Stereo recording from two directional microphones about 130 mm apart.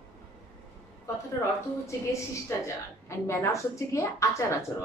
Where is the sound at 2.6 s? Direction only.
20° left (ahead or behind).